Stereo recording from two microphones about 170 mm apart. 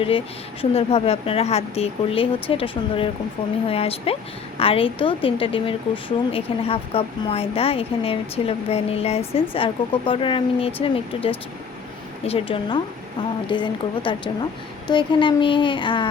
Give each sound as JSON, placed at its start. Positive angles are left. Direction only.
{"t": 0.6, "sound": "a woman's voice", "side_deg": 35}